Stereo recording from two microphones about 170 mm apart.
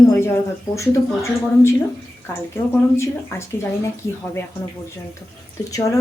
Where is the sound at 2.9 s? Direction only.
15° left (ahead or behind).